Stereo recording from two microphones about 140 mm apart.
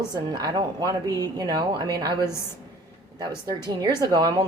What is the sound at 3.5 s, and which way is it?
Speech, 30° right (ahead or behind).